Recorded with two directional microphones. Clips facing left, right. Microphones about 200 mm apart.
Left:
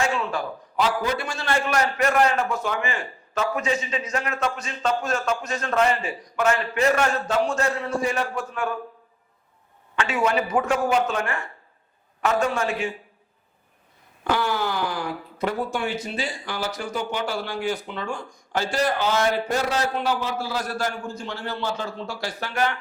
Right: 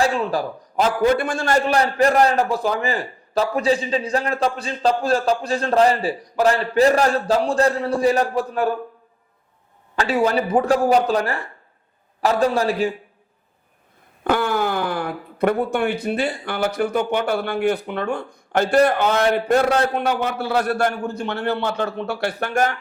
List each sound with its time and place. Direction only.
0.0 s a man's voice: 35° right (ahead or behind)
9.9 s a man's voice: 35° right (ahead or behind)
14.3 s speech: 50° right (ahead or behind)